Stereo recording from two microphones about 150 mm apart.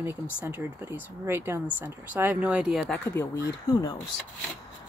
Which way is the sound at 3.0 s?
15° left (ahead or behind).